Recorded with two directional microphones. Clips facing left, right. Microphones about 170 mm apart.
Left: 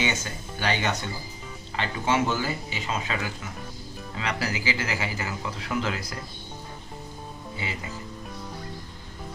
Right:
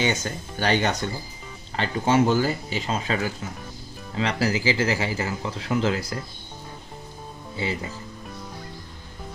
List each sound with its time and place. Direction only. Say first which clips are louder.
0.0 s speech: right 4 dB; 40° right (ahead or behind)